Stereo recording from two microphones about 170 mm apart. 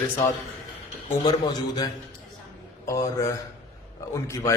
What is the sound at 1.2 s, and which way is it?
A man's voice, 25° left (ahead or behind).